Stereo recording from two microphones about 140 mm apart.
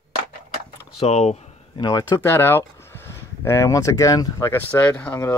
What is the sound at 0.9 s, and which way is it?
Speech, 50° left (ahead or behind).